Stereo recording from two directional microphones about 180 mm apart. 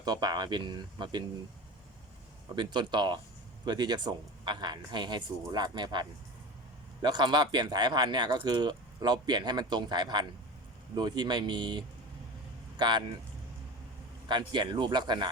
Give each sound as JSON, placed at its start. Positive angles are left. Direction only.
{"t": 0.0, "sound": "speech", "side_deg": -20}
{"t": 2.6, "sound": "speech", "side_deg": -25}
{"t": 14.3, "sound": "speech", "side_deg": -25}